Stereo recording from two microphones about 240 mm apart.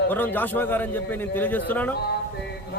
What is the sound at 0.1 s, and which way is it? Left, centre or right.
A man's voice, centre.